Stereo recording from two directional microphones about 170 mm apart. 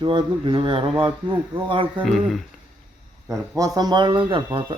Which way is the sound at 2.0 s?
Centre (ahead or behind).